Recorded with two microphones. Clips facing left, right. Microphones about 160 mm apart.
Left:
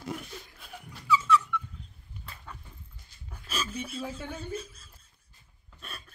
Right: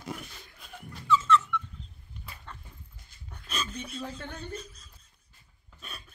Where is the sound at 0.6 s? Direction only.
5° left (ahead or behind).